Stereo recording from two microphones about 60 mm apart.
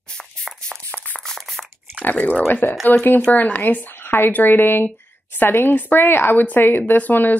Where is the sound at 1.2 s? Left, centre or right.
Centre.